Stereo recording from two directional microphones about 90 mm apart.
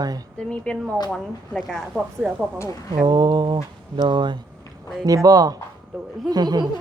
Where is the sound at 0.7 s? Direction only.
10° left (ahead or behind).